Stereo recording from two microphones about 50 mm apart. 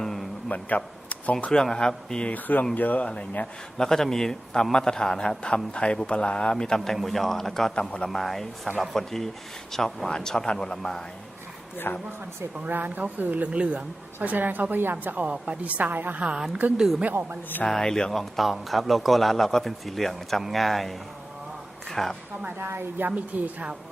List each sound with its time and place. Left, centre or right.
0.0 s a sound: centre
0.5 s speech: left
1.6 s a man's voice: centre
2.3 s speech: left
3.4 s a man's voice: centre
8.1 s a man's voice: centre
11.9 s speech: left
12.5 s a woman's voice: right
16.2 s speech: centre
17.7 s a man's voice: centre
22.4 s a woman's voice: right
23.0 s a woman's voice: right